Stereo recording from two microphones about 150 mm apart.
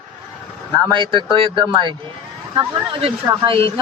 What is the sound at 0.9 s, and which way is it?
Speech, 30° right (ahead or behind).